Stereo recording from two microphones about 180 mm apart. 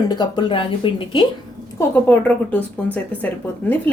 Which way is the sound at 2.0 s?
10° left (ahead or behind).